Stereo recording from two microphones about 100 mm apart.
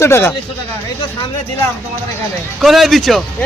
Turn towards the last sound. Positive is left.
turn(degrees=0)  # may be behind; listen again after turning